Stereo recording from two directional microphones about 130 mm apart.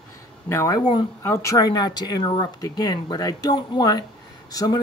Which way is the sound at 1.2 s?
20° left (ahead or behind).